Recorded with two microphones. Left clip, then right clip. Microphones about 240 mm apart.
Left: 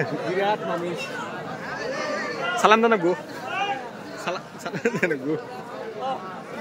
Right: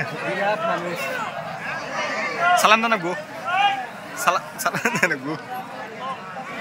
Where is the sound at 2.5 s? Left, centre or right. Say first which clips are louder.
Even; centre.